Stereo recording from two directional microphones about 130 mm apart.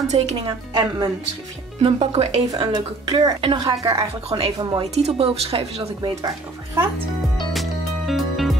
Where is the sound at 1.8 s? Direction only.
45° right (ahead or behind).